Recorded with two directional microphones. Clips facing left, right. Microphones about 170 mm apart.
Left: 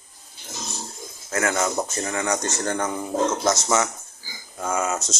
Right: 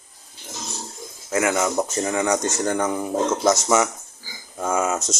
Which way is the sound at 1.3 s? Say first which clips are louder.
Right 3 dB; 15° right (ahead or behind).